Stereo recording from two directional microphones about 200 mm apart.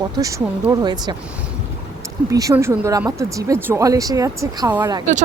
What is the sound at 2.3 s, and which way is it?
Speech, 15° right (ahead or behind).